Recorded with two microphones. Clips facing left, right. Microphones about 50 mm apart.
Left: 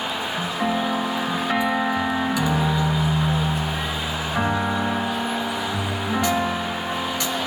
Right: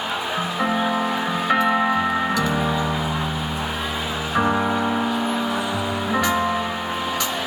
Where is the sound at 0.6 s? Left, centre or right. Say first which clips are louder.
Right 2 dB; right.